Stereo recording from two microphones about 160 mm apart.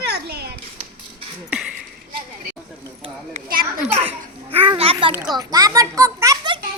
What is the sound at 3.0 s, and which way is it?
Speech, 40° right (ahead or behind).